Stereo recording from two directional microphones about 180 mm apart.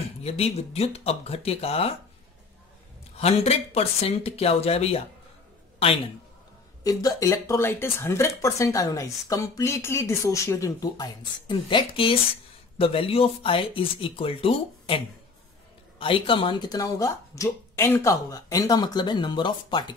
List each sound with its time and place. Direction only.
0.2 s speech: 35° left (ahead or behind)
3.2 s speech: 35° left (ahead or behind)
6.8 s speech: 20° left (ahead or behind)
16.0 s speech: 30° left (ahead or behind)